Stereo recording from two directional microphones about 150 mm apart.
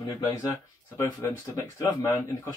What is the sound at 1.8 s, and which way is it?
Speech, 20° left (ahead or behind).